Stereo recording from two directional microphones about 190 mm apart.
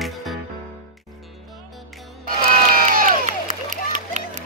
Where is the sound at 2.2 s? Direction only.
45° right (ahead or behind).